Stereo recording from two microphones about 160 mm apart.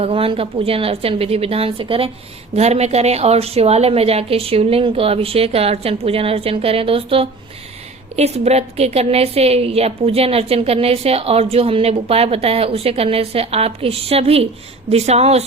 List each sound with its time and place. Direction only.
0.0 s a woman's voice: 35° right (ahead or behind)